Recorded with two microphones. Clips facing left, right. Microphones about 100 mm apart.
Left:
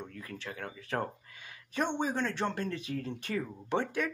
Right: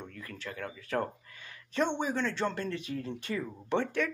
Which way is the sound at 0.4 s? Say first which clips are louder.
Right 4 dB; 20° left (ahead or behind).